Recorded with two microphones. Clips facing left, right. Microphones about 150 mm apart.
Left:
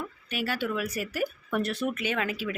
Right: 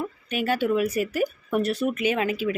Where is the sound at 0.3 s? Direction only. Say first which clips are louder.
Right 7 dB; 20° right (ahead or behind).